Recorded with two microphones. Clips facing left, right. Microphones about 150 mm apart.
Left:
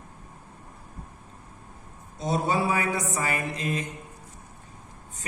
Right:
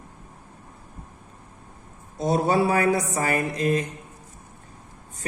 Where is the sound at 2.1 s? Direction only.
40° right (ahead or behind).